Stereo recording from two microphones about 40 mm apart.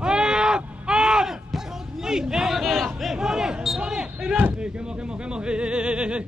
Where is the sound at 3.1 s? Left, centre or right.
Centre.